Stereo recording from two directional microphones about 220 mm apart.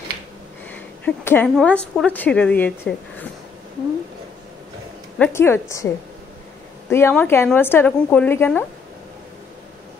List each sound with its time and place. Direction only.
0.7 s a woman's voice: 10° left (ahead or behind)
5.2 s a woman's voice: 10° left (ahead or behind)
6.9 s a woman's voice: 10° left (ahead or behind)